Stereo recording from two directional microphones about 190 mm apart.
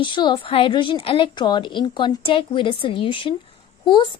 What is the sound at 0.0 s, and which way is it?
A woman's voice, 25° left (ahead or behind).